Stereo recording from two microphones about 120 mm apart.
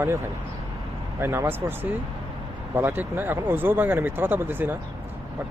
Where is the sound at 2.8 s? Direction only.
15° right (ahead or behind).